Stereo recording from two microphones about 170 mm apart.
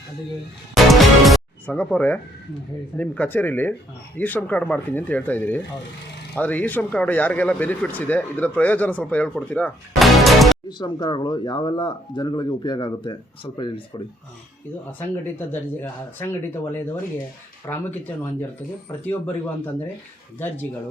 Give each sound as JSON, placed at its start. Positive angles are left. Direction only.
{"t": 0.7, "sound": "music", "side_deg": 0}
{"t": 3.0, "sound": "speech", "side_deg": 10}
{"t": 10.7, "sound": "speech", "side_deg": 25}
{"t": 14.9, "sound": "speech", "side_deg": 15}